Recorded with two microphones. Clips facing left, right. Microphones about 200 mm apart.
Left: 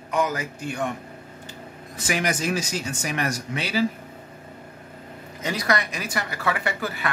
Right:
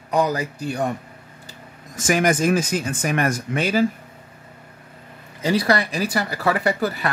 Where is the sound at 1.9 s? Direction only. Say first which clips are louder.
Right 7 dB; 45° right (ahead or behind).